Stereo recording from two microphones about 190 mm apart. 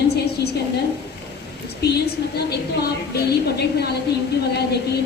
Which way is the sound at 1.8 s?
60° left (ahead or behind).